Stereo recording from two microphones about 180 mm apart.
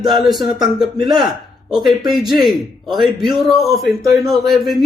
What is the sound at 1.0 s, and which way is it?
Speech, 25° right (ahead or behind).